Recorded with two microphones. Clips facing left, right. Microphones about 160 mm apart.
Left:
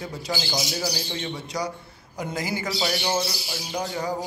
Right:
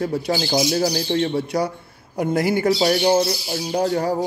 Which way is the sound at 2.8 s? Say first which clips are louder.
Right 7 dB; 40° right (ahead or behind).